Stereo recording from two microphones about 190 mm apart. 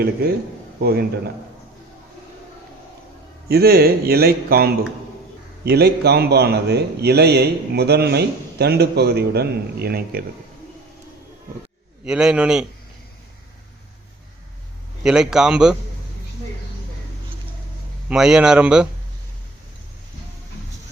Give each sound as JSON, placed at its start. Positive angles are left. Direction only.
{"t": 0.0, "sound": "a man's voice", "side_deg": -55}
{"t": 3.5, "sound": "a man's voice", "side_deg": -55}
{"t": 12.0, "sound": "speech", "side_deg": -5}
{"t": 15.0, "sound": "speech", "side_deg": -5}
{"t": 18.1, "sound": "speech", "side_deg": -5}